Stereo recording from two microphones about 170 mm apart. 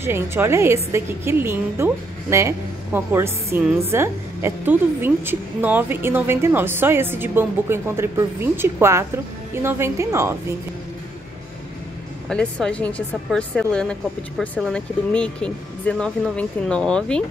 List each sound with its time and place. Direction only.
0.0 s a woman's voice: 15° right (ahead or behind)
12.3 s speech: 5° left (ahead or behind)